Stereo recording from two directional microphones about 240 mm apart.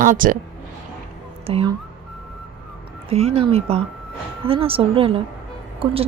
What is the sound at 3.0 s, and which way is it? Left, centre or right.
Speech, right.